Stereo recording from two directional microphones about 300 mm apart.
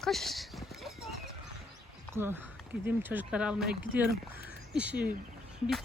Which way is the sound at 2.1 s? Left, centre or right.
Centre.